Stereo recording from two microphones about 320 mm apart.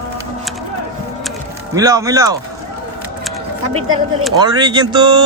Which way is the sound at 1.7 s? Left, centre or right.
Centre.